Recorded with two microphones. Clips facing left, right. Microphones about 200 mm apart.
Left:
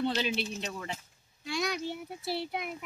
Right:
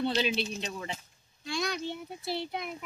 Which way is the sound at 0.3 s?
20° right (ahead or behind).